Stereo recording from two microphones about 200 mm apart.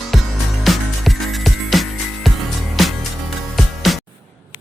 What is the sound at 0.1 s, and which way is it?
Music, centre (ahead or behind).